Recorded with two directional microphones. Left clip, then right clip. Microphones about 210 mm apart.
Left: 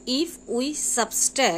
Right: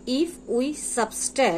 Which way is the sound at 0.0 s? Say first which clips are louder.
Right 1 dB; 20° left (ahead or behind).